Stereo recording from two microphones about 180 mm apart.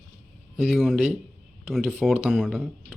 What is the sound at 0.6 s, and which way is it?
Speech, centre (ahead or behind).